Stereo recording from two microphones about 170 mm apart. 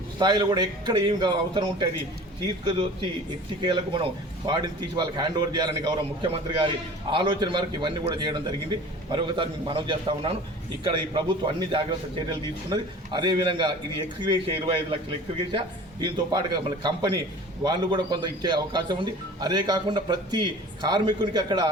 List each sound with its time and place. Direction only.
0.2 s speech: 25° right (ahead or behind)